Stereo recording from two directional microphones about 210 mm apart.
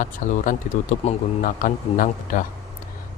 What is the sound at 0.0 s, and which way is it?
A man's voice, 35° left (ahead or behind).